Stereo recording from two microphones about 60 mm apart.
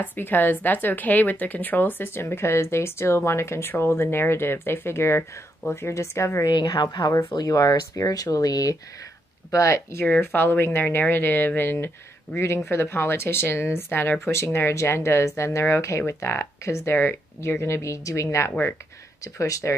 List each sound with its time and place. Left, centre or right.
0.0 s a woman's voice: left
6.4 s speech: left
9.5 s speech: left
10.2 s a woman's voice: left
12.4 s speech: left
19.2 s speech: left